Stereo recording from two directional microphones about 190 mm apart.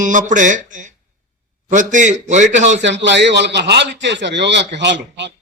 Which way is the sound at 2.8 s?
70° right (ahead or behind).